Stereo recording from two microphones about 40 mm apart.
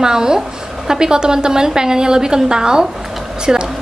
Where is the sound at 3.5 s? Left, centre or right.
Centre.